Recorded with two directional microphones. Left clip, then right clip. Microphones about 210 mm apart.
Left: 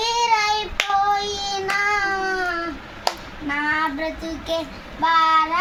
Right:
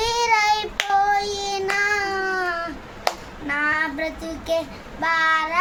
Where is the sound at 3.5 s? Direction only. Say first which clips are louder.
Even; 15° right (ahead or behind).